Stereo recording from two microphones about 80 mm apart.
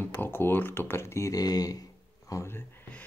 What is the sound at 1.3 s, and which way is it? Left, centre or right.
Speech, left.